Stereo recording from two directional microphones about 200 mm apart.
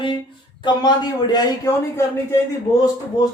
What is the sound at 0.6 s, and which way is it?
Speech, 20° left (ahead or behind).